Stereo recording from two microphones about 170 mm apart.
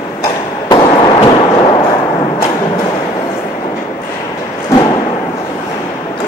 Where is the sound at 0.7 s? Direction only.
25° left (ahead or behind).